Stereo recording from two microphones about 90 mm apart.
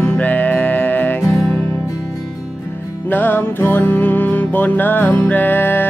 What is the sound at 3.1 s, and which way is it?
Music, 20° left (ahead or behind).